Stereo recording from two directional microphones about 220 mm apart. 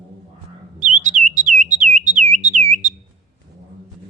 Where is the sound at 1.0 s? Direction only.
35° right (ahead or behind).